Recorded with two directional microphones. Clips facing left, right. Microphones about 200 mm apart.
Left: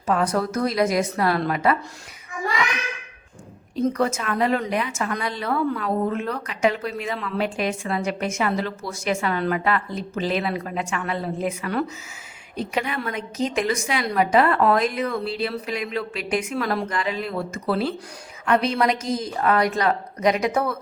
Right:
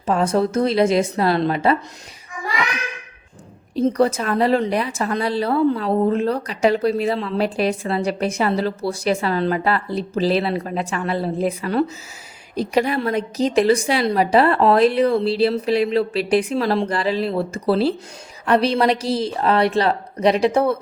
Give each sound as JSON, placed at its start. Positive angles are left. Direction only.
{"t": 0.0, "sound": "a woman's voice", "side_deg": -25}
{"t": 3.8, "sound": "a woman's voice", "side_deg": -30}